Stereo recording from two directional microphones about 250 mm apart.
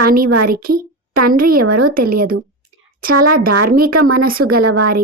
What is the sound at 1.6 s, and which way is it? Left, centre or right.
Speech, right.